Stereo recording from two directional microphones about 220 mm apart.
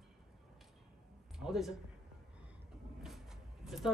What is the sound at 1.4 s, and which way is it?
Speech, centre (ahead or behind).